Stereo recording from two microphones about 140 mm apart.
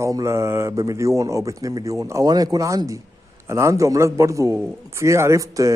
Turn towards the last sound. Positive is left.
turn(degrees=-25)  # may be behind; listen again after turning